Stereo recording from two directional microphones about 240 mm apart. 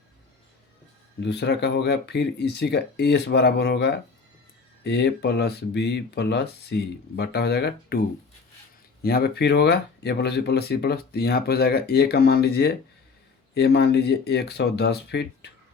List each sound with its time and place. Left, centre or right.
1.2 s speech: left